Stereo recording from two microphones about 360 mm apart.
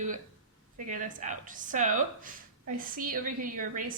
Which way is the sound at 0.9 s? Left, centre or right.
Right.